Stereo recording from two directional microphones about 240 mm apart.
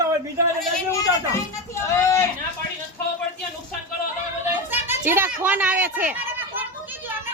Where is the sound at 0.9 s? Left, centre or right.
Centre.